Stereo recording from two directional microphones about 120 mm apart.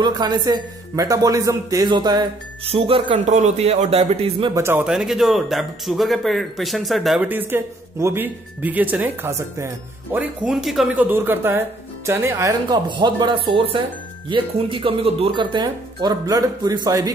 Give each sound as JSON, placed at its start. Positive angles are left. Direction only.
{"t": 0.0, "sound": "a man's voice", "side_deg": -35}
{"t": 2.7, "sound": "speech", "side_deg": -50}
{"t": 3.3, "sound": "a man's voice", "side_deg": -75}
{"t": 4.6, "sound": "speech", "side_deg": -20}
{"t": 4.8, "sound": "speech", "side_deg": -5}
{"t": 7.2, "sound": "speech", "side_deg": -15}
{"t": 10.5, "sound": "speech", "side_deg": 0}
{"t": 11.0, "sound": "speech", "side_deg": -15}
{"t": 12.6, "sound": "a man's voice", "side_deg": -40}
{"t": 15.5, "sound": "a man's voice", "side_deg": -35}